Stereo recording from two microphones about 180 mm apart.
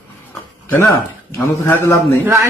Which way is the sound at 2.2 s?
15° right (ahead or behind).